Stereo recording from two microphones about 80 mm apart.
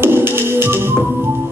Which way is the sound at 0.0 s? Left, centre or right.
Right.